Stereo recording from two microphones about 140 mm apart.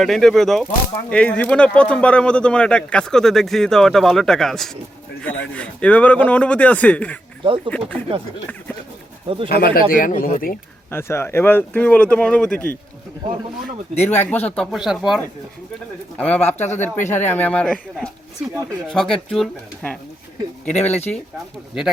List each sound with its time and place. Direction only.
0.0 s speech: centre (ahead or behind)
7.4 s speech: 40° right (ahead or behind)
9.6 s speech: 90° left
9.9 s speech: 80° left
10.9 s speech: 15° left (ahead or behind)
13.9 s speech: 55° left (ahead or behind)
14.2 s speech: 10° left (ahead or behind)
14.7 s speech: 5° right (ahead or behind)
16.1 s speech: 10° left (ahead or behind)
20.7 s speech: 55° left (ahead or behind)